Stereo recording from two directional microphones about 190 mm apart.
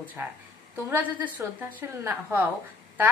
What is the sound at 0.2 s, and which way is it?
A woman's voice, 10° right (ahead or behind).